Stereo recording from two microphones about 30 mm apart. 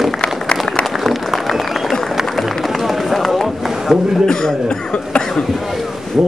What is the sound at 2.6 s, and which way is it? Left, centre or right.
Run, centre.